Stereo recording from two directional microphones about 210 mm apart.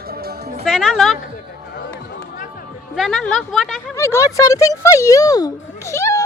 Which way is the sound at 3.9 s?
15° left (ahead or behind).